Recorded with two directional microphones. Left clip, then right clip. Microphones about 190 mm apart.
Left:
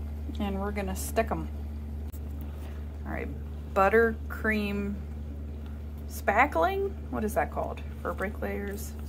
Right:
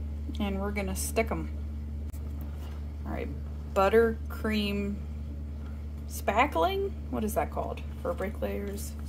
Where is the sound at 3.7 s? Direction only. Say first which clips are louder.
Left 1 dB; 5° right (ahead or behind).